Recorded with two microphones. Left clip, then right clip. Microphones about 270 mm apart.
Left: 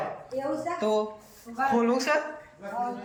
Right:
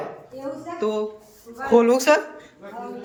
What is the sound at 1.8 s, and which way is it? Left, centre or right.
Speech, right.